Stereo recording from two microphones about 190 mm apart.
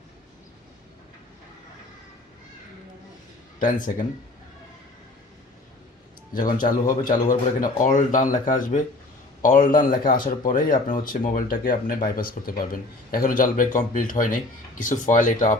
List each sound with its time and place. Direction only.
3.6 s speech: 45° left (ahead or behind)
6.3 s speech: 45° left (ahead or behind)